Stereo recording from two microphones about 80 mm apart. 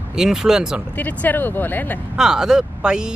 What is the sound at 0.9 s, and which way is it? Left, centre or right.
Speech, left.